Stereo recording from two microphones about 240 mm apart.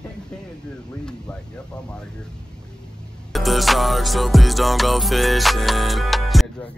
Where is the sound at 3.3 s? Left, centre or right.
Centre.